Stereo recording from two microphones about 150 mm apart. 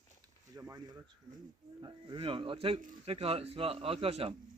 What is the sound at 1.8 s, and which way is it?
Speech, 30° right (ahead or behind).